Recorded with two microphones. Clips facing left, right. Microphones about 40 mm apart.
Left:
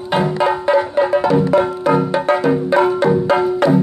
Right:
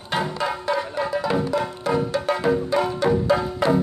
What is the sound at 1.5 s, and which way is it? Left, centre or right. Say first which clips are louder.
Music: left 8 dB; left.